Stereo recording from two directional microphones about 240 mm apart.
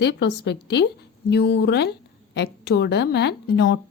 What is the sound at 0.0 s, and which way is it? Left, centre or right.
A woman's voice, left.